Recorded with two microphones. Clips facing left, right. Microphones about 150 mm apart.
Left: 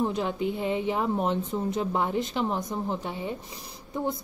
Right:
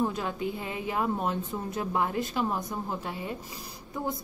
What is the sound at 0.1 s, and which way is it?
A woman's voice, 25° left (ahead or behind).